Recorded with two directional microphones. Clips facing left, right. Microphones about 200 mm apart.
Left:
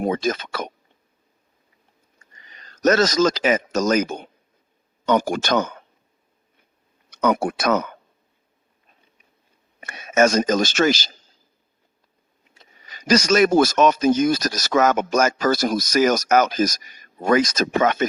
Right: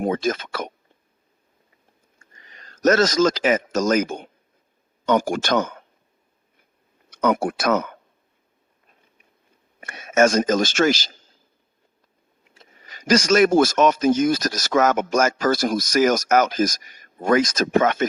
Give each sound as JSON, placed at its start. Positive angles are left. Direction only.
{"t": 0.1, "sound": "a man's voice", "side_deg": -50}
{"t": 2.8, "sound": "a man's voice", "side_deg": -50}
{"t": 7.1, "sound": "speech", "side_deg": -50}
{"t": 9.8, "sound": "a man's voice", "side_deg": -50}
{"t": 12.8, "sound": "a man's voice", "side_deg": -50}